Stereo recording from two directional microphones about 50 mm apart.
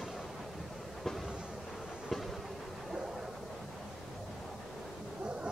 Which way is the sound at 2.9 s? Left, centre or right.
Centre.